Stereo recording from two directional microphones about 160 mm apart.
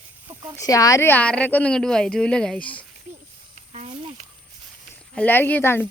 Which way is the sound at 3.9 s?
35° right (ahead or behind).